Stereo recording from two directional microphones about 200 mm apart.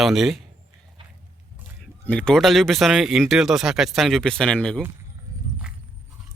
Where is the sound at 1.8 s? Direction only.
5° left (ahead or behind).